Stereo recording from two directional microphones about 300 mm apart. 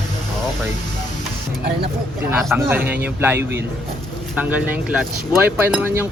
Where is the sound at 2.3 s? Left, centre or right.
Centre.